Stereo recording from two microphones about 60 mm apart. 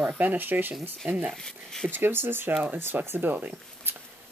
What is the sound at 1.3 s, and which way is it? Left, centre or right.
Speech, centre.